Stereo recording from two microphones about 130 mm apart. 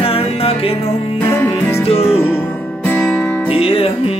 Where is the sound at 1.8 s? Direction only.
55° left (ahead or behind).